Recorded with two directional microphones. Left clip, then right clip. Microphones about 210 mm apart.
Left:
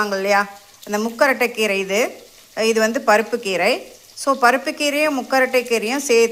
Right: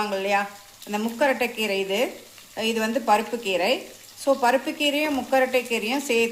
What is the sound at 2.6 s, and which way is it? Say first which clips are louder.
Speech: left 7 dB; 20° left (ahead or behind).